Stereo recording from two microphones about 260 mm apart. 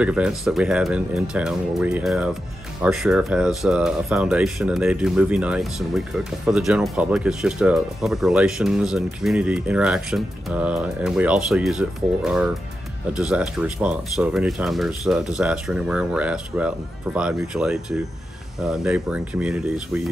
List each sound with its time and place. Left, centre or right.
0.0 s speech: centre